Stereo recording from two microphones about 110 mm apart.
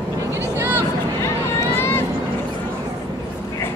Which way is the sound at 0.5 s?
20° right (ahead or behind).